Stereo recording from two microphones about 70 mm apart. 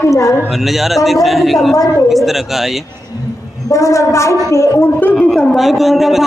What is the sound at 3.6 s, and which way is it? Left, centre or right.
A man's voice, left.